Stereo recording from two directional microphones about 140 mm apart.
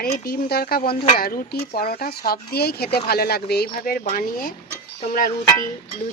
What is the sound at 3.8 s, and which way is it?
Speech, 75° left (ahead or behind).